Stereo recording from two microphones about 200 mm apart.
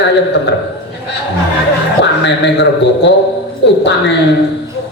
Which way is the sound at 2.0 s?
60° left (ahead or behind).